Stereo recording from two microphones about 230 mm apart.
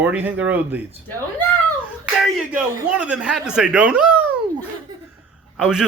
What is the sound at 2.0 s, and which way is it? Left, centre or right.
Speech, centre.